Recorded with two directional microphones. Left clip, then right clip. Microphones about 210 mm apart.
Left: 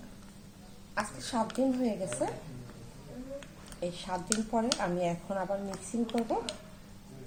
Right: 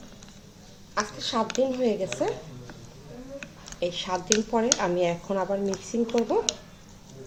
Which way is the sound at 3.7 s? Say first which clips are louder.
Right 7 dB; 40° right (ahead or behind).